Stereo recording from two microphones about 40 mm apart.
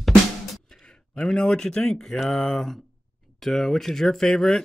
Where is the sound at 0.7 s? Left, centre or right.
Centre.